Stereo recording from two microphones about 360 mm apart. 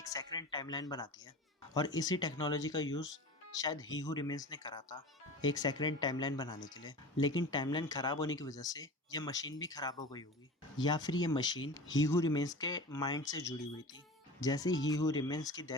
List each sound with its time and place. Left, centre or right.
0.0 s speech: centre